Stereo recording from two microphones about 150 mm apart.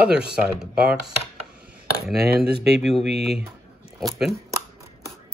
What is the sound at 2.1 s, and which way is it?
Speech, 90° right.